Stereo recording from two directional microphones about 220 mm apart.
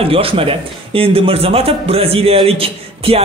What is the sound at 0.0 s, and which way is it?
A man's voice, 25° right (ahead or behind).